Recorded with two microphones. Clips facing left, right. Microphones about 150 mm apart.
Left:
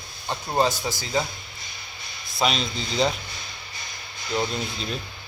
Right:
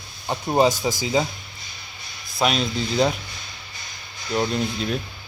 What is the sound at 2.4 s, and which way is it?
Speech, 5° right (ahead or behind).